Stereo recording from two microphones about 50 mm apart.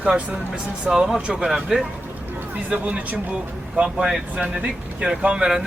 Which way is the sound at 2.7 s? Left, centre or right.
Right.